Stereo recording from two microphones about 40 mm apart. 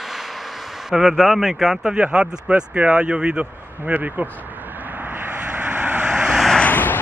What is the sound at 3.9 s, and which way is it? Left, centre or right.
Speech, right.